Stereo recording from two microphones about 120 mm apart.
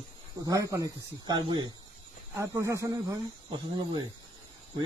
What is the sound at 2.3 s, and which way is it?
Speech, 25° right (ahead or behind).